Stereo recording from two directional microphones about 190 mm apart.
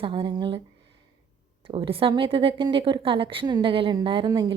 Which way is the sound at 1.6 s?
30° right (ahead or behind).